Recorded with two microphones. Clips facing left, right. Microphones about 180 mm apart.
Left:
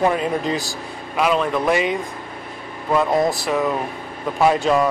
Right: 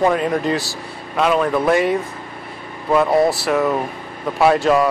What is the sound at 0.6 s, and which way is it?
Speech, 15° left (ahead or behind).